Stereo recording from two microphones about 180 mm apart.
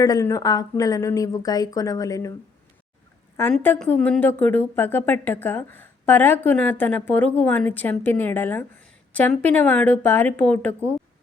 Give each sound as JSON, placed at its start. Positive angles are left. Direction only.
{"t": 0.0, "sound": "speech", "side_deg": 20}
{"t": 3.5, "sound": "speech", "side_deg": 5}